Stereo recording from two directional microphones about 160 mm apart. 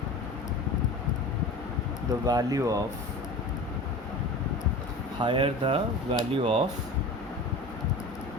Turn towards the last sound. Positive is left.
turn(degrees=-35)  # may be behind; listen again after turning